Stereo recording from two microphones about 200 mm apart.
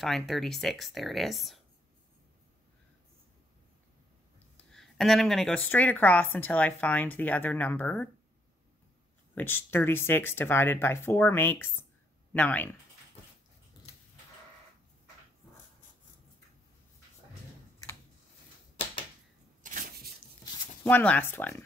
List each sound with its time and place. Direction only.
0.0 s speech: centre (ahead or behind)
4.6 s speech: centre (ahead or behind)
9.3 s speech: 10° left (ahead or behind)
19.6 s a sound: 40° right (ahead or behind)
20.8 s speech: 10° left (ahead or behind)